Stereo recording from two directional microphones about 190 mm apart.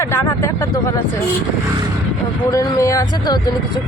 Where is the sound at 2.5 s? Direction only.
15° left (ahead or behind).